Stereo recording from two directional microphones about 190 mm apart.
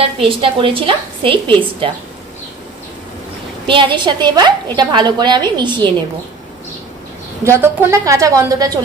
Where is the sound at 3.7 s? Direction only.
25° right (ahead or behind).